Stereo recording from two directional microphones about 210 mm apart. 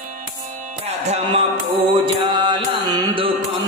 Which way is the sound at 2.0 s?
20° right (ahead or behind).